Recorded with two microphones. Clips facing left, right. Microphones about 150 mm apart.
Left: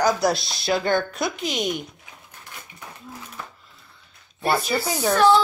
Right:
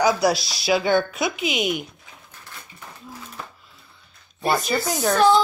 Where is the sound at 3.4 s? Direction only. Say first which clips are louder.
Right 1 dB; 10° right (ahead or behind).